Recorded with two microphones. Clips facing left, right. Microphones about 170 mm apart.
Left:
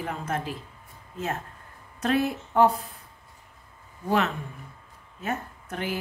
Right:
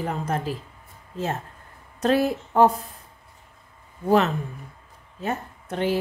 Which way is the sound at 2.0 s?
35° right (ahead or behind).